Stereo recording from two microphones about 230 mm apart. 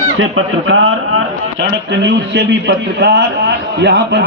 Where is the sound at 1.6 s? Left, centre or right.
Right.